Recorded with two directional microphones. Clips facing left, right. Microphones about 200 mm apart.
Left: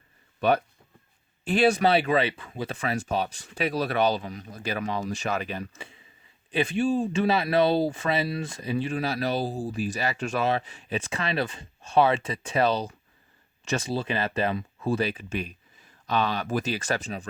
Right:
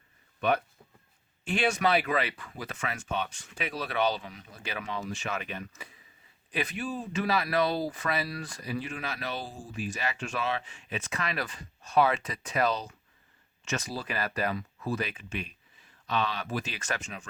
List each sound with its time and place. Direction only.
0.3 s speech: 35° left (ahead or behind)